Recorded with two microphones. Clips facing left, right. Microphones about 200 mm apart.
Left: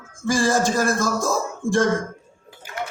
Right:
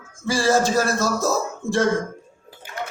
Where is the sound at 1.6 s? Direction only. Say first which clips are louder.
Left 3 dB; centre (ahead or behind).